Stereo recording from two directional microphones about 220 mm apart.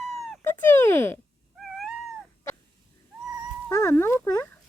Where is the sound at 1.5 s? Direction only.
Centre (ahead or behind).